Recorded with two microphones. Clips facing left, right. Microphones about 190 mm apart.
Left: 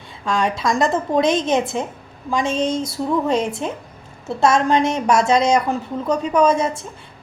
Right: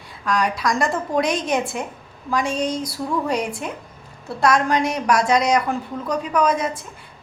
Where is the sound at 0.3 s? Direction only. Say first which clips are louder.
Left 1 dB; 25° left (ahead or behind).